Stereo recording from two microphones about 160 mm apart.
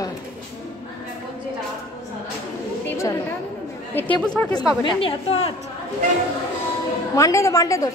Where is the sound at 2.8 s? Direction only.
15° left (ahead or behind).